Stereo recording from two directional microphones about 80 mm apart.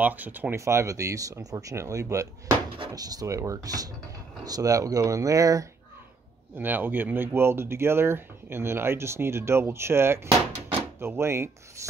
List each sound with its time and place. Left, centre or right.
0.0 s speech: right
0.6 s speech: right
6.5 s speech: right